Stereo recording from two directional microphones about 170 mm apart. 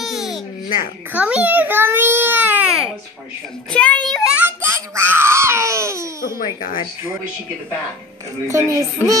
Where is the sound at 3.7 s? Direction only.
5° left (ahead or behind).